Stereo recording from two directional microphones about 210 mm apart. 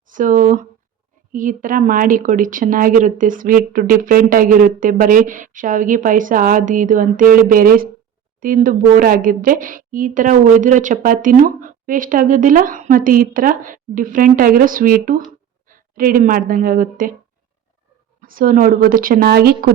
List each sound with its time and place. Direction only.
0.1 s a woman's voice: 40° right (ahead or behind)
18.2 s speech: 40° right (ahead or behind)